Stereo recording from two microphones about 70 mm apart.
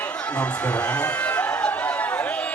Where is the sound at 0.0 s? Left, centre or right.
Centre.